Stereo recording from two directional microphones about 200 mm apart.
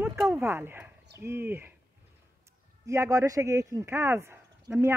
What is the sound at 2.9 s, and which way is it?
Speech, 15° right (ahead or behind).